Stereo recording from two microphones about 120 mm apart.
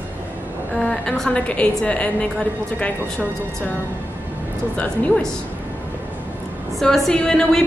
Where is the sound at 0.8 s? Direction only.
5° left (ahead or behind).